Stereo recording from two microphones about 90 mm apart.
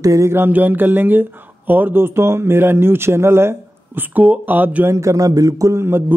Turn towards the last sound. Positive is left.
turn(degrees=-25)  # may be behind; listen again after turning